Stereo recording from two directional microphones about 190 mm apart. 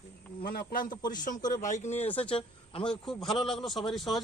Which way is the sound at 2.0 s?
10° left (ahead or behind).